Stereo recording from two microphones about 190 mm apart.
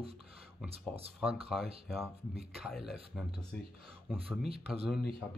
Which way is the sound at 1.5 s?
Centre (ahead or behind).